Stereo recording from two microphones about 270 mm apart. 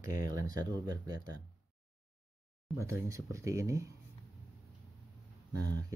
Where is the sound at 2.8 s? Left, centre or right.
Centre.